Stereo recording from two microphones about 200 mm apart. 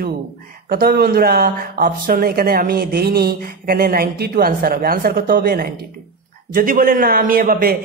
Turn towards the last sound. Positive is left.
turn(degrees=-50)  # may be behind; listen again after turning